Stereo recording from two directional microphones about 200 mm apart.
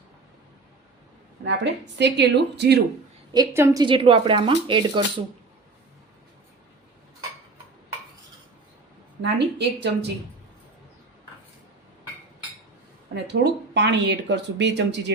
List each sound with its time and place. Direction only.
1.5 s speech: 60° right (ahead or behind)
3.3 s a woman's voice: 15° right (ahead or behind)
9.6 s speech: 55° right (ahead or behind)
13.1 s speech: 55° right (ahead or behind)